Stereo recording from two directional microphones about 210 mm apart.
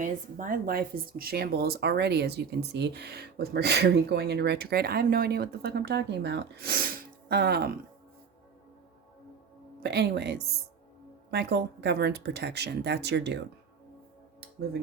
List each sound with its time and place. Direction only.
0.0 s speech: 40° right (ahead or behind)
9.8 s speech: 50° right (ahead or behind)